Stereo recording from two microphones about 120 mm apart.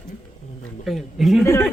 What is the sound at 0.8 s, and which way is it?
Speech, centre (ahead or behind).